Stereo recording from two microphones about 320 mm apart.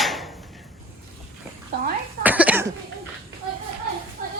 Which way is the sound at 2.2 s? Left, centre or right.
Centre.